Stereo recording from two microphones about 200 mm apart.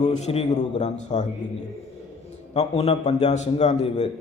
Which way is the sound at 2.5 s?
30° left (ahead or behind).